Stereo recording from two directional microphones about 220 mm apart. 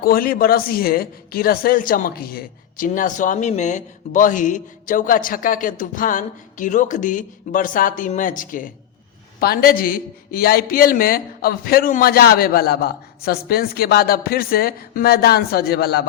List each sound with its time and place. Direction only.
0.0 s a man's voice: 40° left (ahead or behind)